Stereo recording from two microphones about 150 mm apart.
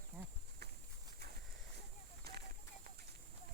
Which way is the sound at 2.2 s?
90° right.